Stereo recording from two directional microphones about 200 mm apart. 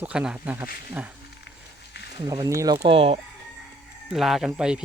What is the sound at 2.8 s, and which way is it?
Speech, 30° right (ahead or behind).